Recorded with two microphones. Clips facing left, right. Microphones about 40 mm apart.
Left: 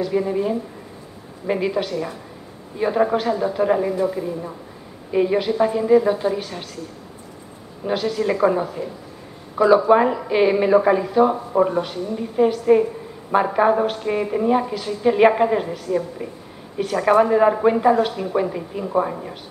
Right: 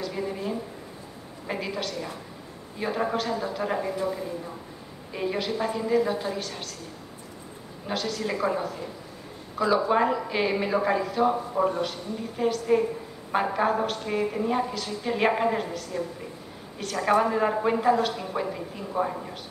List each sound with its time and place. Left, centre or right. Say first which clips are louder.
0.0 s a woman's voice: left 10 dB; centre
7.8 s a woman's voice: left 8 dB; centre
9.8 s a woman's voice: left 7 dB; centre